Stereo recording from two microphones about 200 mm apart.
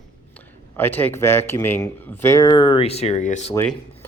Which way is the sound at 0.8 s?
10° left (ahead or behind).